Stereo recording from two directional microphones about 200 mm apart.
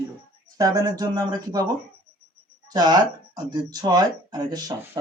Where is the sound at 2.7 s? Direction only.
20° right (ahead or behind).